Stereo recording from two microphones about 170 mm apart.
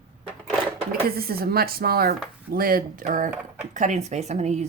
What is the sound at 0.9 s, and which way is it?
Speech, 65° right (ahead or behind).